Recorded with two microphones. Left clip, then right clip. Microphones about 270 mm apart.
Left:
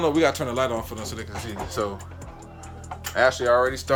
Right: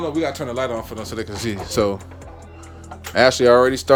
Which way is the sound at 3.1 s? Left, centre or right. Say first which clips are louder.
Right 6 dB; right.